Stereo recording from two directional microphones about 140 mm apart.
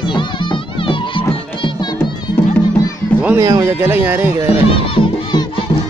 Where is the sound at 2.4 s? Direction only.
15° left (ahead or behind).